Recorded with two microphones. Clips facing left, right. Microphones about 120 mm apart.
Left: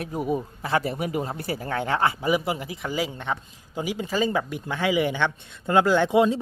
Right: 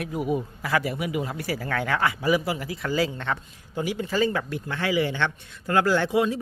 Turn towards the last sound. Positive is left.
turn(degrees=25)  # may be behind; listen again after turning